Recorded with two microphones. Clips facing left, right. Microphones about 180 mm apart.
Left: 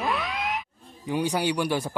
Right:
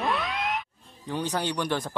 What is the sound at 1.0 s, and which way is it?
Speech, 10° left (ahead or behind).